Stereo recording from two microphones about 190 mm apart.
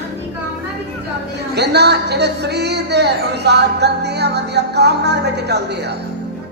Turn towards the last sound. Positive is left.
turn(degrees=-60)  # may be behind; listen again after turning